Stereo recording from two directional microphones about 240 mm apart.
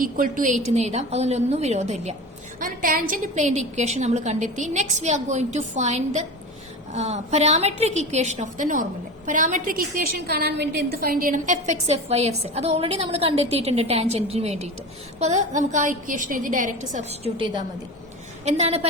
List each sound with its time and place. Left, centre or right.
0.0 s a woman's voice: right